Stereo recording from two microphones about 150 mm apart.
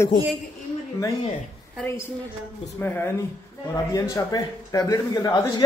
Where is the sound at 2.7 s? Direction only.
15° left (ahead or behind).